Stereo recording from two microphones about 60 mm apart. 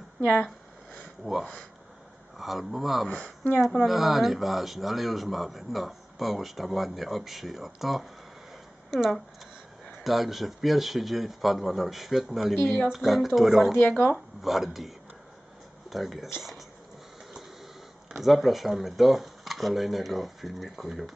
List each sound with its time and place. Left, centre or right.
0.2 s speech: centre
1.2 s speech: centre
3.1 s speech: left
3.6 s speech: centre
13.7 s speech: left
14.0 s speech: centre
15.9 s speech: centre
18.1 s speech: centre